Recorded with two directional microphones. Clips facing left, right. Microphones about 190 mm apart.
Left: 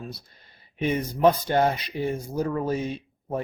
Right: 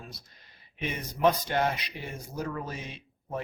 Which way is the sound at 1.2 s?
35° left (ahead or behind).